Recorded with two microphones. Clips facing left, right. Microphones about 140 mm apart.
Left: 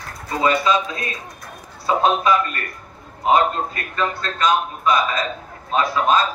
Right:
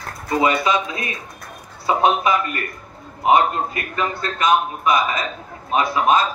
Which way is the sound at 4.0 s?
15° right (ahead or behind).